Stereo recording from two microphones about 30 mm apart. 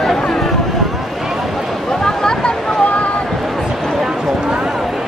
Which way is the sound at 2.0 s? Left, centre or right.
Left.